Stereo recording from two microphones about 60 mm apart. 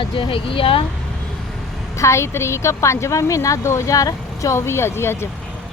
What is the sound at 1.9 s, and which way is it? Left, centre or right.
A woman's voice, left.